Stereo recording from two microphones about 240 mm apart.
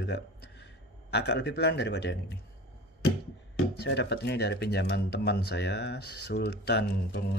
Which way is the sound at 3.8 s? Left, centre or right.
Left.